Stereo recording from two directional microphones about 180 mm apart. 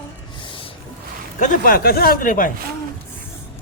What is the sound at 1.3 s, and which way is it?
Speech, 45° left (ahead or behind).